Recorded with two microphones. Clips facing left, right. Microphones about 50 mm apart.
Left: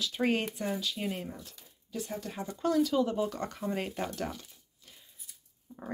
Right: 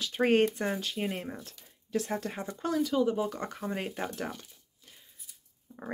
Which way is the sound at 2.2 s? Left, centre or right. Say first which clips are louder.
Right 2 dB; right.